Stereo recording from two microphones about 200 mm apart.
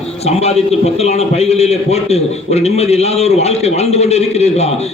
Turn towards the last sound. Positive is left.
turn(degrees=30)  # may be behind; listen again after turning